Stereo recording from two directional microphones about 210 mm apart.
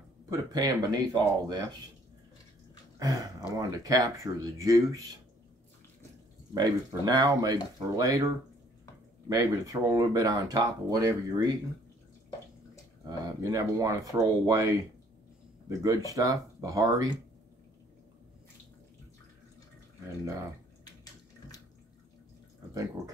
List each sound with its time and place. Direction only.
0.3 s speech: 15° right (ahead or behind)
3.0 s speech: 15° right (ahead or behind)
6.5 s speech: 20° right (ahead or behind)
9.3 s speech: 15° right (ahead or behind)
13.0 s speech: 15° right (ahead or behind)
15.8 s speech: 15° right (ahead or behind)
20.8 s bathtub: 15° left (ahead or behind)